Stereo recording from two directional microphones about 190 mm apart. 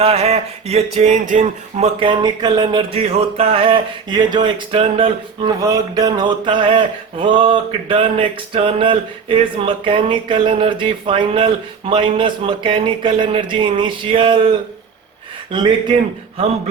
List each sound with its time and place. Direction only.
0.0 s a sound: 30° right (ahead or behind)
2.0 s speech: 25° right (ahead or behind)
15.5 s speech: 25° right (ahead or behind)